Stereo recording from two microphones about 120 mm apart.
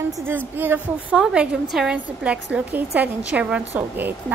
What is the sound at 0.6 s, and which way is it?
A woman's voice, 15° right (ahead or behind).